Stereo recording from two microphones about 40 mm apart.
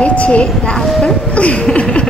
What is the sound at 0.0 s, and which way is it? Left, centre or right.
Speech, left.